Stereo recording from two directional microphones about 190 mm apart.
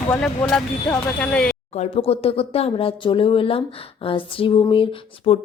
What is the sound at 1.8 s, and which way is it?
Speech, 30° left (ahead or behind).